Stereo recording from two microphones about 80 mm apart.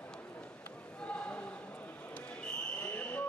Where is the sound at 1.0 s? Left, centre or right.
Centre.